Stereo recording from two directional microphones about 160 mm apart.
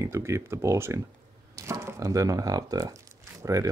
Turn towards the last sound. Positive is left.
turn(degrees=-20)  # may be behind; listen again after turning